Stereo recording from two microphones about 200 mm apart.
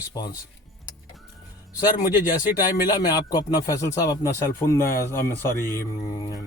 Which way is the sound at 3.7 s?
15° left (ahead or behind).